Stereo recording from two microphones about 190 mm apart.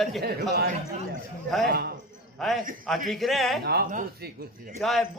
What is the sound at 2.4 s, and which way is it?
A man's voice, centre (ahead or behind).